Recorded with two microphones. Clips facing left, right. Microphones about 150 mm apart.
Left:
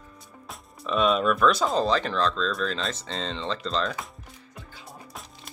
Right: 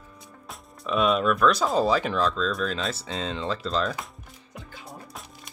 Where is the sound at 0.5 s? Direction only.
Centre (ahead or behind).